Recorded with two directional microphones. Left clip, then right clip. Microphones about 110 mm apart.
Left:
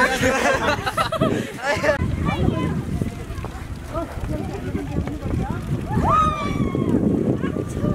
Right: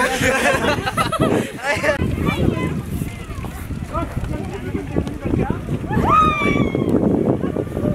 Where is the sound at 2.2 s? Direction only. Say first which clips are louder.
Right 3 dB; 10° right (ahead or behind).